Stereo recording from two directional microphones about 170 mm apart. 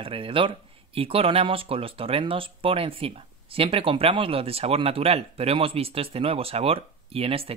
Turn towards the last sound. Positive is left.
turn(degrees=-35)  # may be behind; listen again after turning